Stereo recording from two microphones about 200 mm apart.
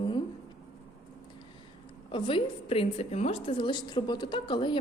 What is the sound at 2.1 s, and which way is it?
A woman's voice, 25° left (ahead or behind).